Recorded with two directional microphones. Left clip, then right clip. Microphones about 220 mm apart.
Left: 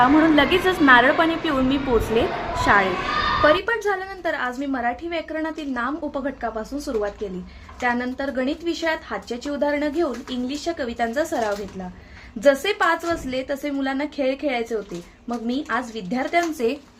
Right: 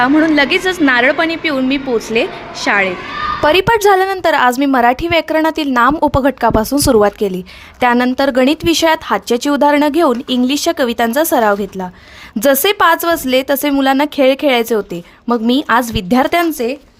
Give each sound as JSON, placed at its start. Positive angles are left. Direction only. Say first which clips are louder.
{"t": 0.0, "sound": "a woman's voice", "louder": "right 5 dB", "side_deg": -45}